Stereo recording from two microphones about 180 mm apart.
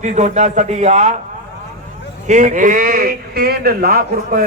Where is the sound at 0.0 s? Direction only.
40° right (ahead or behind).